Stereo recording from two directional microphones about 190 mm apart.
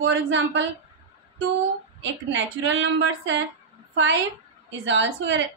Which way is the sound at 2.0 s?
75° right (ahead or behind).